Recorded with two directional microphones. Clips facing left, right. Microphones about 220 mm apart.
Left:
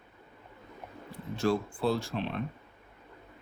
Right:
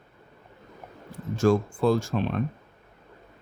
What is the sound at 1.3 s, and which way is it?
Speech, 45° right (ahead or behind).